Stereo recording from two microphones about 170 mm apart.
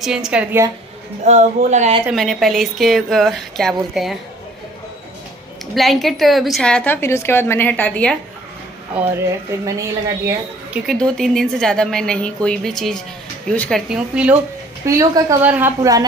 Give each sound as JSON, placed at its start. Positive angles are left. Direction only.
{"t": 0.0, "sound": "a woman's voice", "side_deg": -5}
{"t": 1.2, "sound": "a man's voice", "side_deg": -45}
{"t": 2.0, "sound": "a woman's voice", "side_deg": 0}
{"t": 5.8, "sound": "a woman's voice", "side_deg": 0}
{"t": 9.0, "sound": "a woman's voice", "side_deg": -5}
{"t": 10.9, "sound": "a woman's voice", "side_deg": 0}
{"t": 14.9, "sound": "a woman's voice", "side_deg": -20}